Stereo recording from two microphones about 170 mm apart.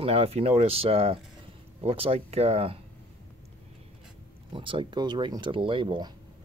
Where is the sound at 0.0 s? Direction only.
35° right (ahead or behind).